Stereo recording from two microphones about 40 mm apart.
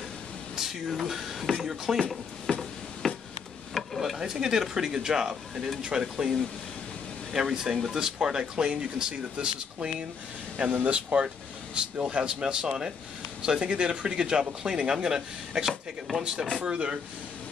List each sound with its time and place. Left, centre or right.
0.6 s speech: centre
2.5 s a sound: left
3.0 s a sound: centre
4.0 s speech: centre
7.3 s speech: centre; by 10.7 s right
11.1 s speech: right
11.7 s speech: right